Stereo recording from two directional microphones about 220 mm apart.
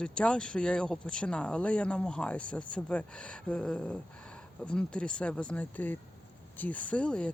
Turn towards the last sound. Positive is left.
turn(degrees=5)  # may be behind; listen again after turning